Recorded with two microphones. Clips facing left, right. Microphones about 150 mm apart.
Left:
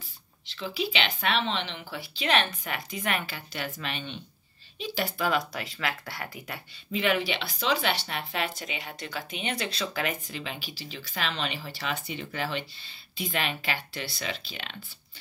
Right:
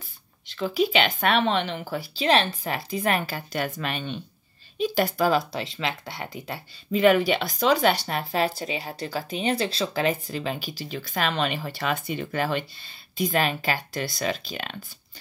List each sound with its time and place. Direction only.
0.5 s speech: 45° right (ahead or behind)
5.5 s speech: 25° right (ahead or behind)
6.9 s speech: 45° right (ahead or behind)